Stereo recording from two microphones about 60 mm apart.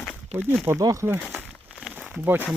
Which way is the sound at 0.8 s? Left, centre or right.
Right.